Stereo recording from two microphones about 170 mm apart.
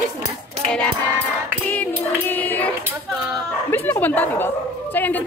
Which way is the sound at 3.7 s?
10° left (ahead or behind).